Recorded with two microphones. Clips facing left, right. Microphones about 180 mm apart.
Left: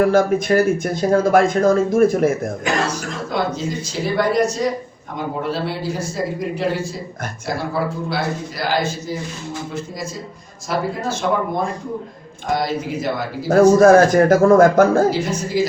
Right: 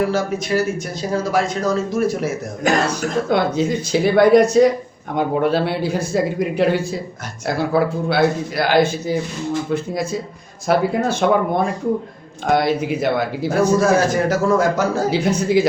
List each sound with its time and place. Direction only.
0.0 s speech: 50° left (ahead or behind)
3.2 s a man's voice: 65° right (ahead or behind)
13.5 s speech: 50° left (ahead or behind)
15.1 s a man's voice: 60° right (ahead or behind)